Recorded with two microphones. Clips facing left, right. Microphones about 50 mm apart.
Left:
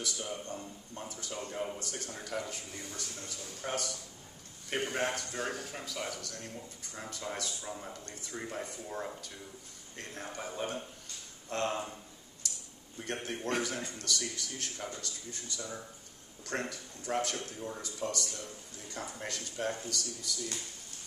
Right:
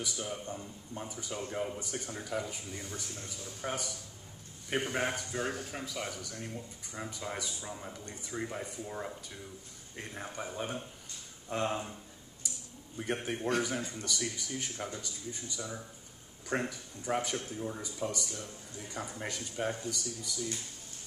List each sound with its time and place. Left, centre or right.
0.2 s speech: centre
1.8 s speech: centre
4.9 s speech: centre
12.4 s a sound: centre
13.0 s speech: centre